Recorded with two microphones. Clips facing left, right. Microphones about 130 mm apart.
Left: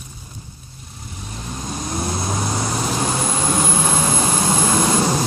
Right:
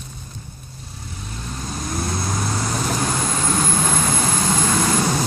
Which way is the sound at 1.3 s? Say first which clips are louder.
Left 2 dB; 15° left (ahead or behind).